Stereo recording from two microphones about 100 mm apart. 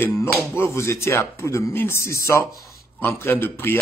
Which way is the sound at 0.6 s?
25° left (ahead or behind).